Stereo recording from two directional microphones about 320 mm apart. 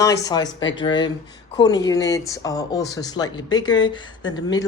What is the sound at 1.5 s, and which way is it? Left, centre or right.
Speech, centre.